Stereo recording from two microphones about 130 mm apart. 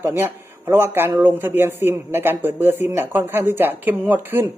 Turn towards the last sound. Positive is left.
turn(degrees=-15)  # may be behind; listen again after turning